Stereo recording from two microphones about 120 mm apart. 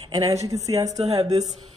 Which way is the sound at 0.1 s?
30° right (ahead or behind).